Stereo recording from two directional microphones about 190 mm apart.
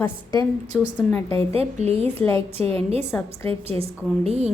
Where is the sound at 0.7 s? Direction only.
5° left (ahead or behind).